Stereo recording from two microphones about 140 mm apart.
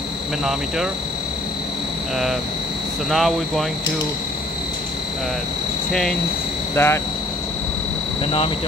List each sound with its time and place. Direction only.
3.1 s speech: centre (ahead or behind)
5.9 s speech: 5° left (ahead or behind)
6.7 s speech: 15° left (ahead or behind)